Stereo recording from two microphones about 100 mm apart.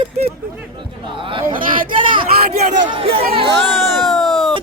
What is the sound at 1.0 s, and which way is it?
Speech, 60° right (ahead or behind).